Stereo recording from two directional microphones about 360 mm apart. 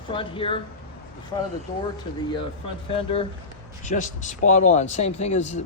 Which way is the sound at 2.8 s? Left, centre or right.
Centre.